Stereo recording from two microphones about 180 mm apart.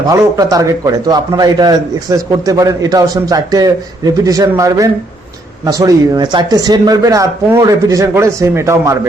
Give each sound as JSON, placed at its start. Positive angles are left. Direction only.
{"t": 0.0, "sound": "a man's voice", "side_deg": -20}